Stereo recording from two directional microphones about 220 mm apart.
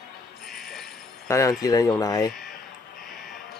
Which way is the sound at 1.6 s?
15° left (ahead or behind).